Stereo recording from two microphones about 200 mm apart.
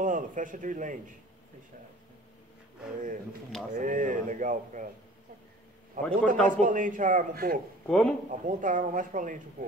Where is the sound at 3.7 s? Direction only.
40° right (ahead or behind).